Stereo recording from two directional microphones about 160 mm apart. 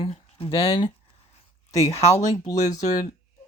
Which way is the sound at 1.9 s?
35° left (ahead or behind).